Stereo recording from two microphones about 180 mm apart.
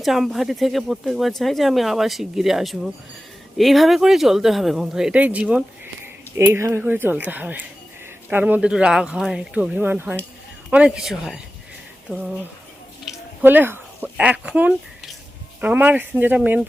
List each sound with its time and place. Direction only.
0.0 s speech: centre (ahead or behind)
12.0 s a sound: 5° right (ahead or behind)
15.6 s speech: 10° right (ahead or behind)